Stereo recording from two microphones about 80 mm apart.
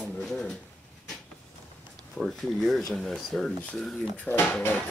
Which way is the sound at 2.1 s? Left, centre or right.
Centre.